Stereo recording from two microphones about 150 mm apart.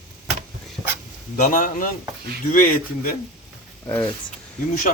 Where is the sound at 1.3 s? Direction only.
65° left (ahead or behind).